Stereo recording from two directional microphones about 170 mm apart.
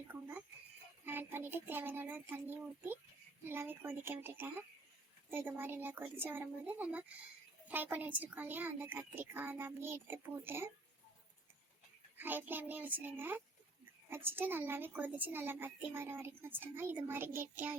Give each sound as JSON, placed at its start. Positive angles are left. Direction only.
{"t": 0.1, "sound": "a child's voice", "side_deg": -10}
{"t": 12.1, "sound": "a child's voice", "side_deg": -10}